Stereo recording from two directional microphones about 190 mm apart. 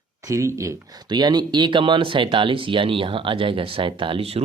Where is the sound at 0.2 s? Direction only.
15° right (ahead or behind).